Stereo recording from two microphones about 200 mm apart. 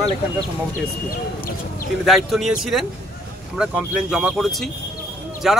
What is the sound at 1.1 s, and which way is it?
Speech, 45° left (ahead or behind).